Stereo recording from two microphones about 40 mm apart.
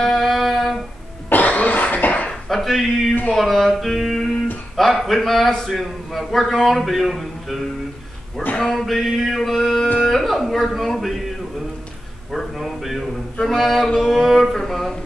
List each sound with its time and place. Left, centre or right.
0.0 s music: centre
1.3 s cough: left
2.4 s a man's voice: centre
12.3 s a man's voice: centre